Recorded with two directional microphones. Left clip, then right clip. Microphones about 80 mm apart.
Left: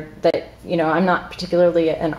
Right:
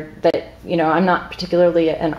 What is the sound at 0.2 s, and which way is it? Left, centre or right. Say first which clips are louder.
Speech: right 1 dB; centre.